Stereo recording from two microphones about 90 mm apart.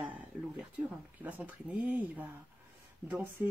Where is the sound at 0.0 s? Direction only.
15° right (ahead or behind).